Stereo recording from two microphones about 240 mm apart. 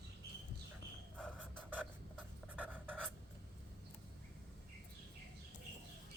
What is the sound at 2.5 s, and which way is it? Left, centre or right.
Writing, centre.